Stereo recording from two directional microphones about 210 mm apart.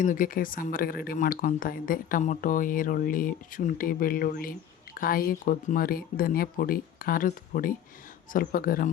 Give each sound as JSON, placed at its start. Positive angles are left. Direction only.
{"t": 0.0, "sound": "speech", "side_deg": 40}